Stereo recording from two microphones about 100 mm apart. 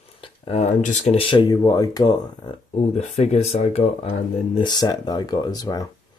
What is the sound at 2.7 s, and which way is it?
Speech, 90° left.